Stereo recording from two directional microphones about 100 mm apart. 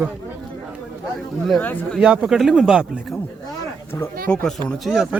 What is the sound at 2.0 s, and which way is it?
Speech, 10° right (ahead or behind).